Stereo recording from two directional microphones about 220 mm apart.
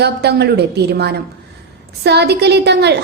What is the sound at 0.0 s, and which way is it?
A woman's voice, 50° right (ahead or behind).